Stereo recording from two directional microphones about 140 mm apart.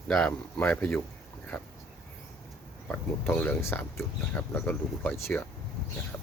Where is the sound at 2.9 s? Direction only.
15° left (ahead or behind).